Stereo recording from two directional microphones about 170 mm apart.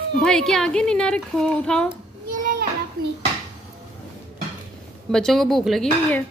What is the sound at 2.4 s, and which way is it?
Children playing, 55° right (ahead or behind).